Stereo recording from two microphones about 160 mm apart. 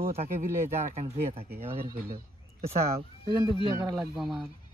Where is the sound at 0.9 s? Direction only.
40° right (ahead or behind).